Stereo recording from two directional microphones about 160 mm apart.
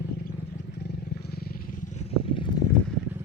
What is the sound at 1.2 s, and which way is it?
Vehicle, 75° left (ahead or behind).